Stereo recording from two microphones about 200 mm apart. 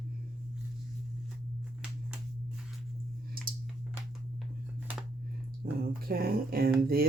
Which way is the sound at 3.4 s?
50° right (ahead or behind).